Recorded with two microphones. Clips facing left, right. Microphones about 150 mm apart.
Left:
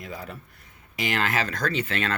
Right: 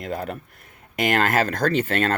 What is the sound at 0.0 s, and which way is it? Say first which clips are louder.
Speech: right 8 dB; 65° right (ahead or behind).